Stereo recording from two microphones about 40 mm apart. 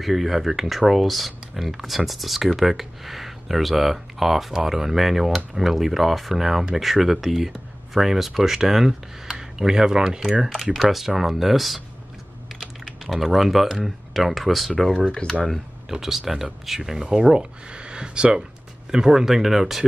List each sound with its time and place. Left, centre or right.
0.0 s speech: centre
10.6 s speech: centre
12.8 s speech: centre
16.0 s speech: centre